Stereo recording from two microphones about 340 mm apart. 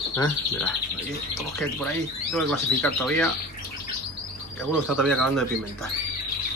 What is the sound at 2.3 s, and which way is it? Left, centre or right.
Speech, centre.